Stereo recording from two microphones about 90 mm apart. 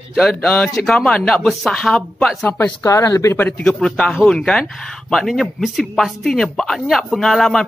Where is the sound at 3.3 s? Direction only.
20° left (ahead or behind).